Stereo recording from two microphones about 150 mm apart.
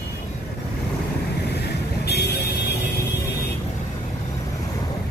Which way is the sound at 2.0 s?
90° left.